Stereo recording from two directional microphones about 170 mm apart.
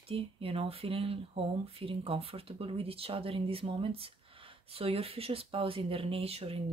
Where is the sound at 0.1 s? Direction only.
35° right (ahead or behind).